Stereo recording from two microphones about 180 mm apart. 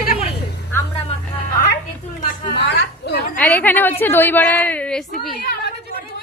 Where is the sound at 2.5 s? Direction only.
75° left (ahead or behind).